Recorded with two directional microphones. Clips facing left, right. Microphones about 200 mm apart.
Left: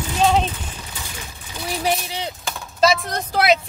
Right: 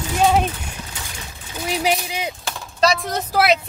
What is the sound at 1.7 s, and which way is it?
Speech, 15° right (ahead or behind).